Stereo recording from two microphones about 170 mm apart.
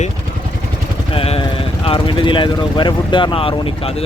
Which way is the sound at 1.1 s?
35° left (ahead or behind).